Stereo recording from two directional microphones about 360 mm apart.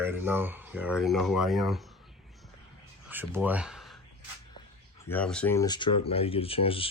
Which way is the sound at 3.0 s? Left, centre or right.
Centre.